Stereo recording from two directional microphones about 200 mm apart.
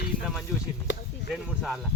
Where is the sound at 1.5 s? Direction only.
Centre (ahead or behind).